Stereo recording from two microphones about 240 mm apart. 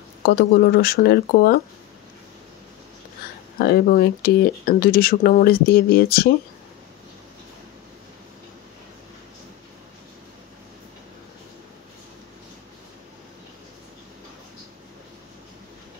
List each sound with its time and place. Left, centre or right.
0.2 s speech: left
3.5 s speech: left